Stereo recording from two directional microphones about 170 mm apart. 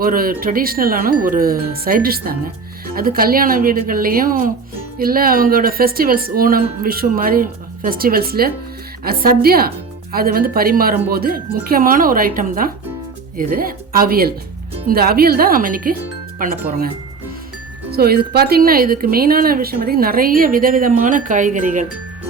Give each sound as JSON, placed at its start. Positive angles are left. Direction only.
{"t": 0.0, "sound": "speech", "side_deg": -60}
{"t": 17.9, "sound": "speech", "side_deg": -65}